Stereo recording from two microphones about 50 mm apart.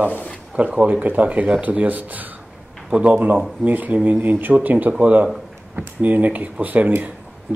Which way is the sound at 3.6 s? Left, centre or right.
Right.